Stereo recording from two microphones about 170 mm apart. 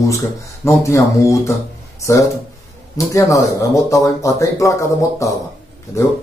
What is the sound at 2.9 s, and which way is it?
A man's voice, 20° left (ahead or behind).